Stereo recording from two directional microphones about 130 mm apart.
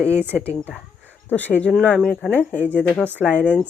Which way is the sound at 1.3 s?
15° left (ahead or behind).